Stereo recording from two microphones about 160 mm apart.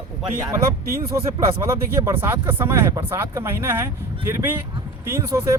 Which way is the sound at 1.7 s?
15° right (ahead or behind).